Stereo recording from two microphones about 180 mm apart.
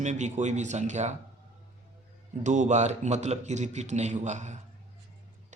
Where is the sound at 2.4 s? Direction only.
40° right (ahead or behind).